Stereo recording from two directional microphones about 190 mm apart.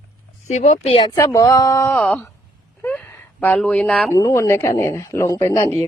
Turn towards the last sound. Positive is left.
turn(degrees=15)  # may be behind; listen again after turning